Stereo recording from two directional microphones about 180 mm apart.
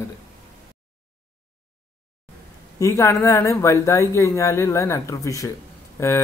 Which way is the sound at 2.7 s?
15° left (ahead or behind).